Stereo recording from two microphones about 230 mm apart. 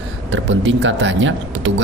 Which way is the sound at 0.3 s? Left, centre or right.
Right.